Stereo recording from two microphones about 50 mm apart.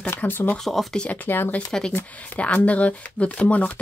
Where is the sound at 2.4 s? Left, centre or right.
Left.